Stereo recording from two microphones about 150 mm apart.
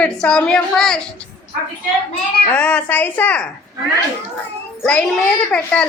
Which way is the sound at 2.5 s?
10° left (ahead or behind).